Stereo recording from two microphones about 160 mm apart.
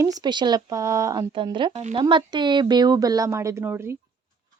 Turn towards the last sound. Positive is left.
turn(degrees=-15)  # may be behind; listen again after turning